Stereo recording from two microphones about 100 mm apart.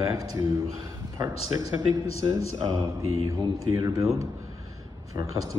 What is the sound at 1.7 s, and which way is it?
A man's voice, 35° right (ahead or behind).